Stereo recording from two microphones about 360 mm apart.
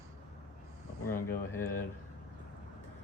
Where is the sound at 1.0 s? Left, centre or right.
Centre.